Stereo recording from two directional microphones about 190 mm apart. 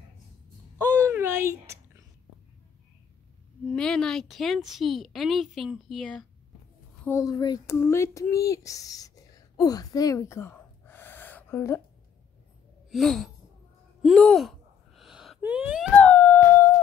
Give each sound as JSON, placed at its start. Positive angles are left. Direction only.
{"t": 0.7, "sound": "a sound", "side_deg": -15}
{"t": 3.7, "sound": "speech", "side_deg": 5}
{"t": 7.1, "sound": "speech", "side_deg": 15}
{"t": 12.9, "sound": "speech", "side_deg": 0}
{"t": 14.0, "sound": "gasp", "side_deg": 0}
{"t": 16.0, "sound": "howl", "side_deg": 10}